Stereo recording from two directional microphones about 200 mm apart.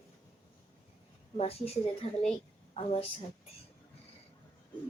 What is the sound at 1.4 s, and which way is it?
A woman's voice, 30° left (ahead or behind).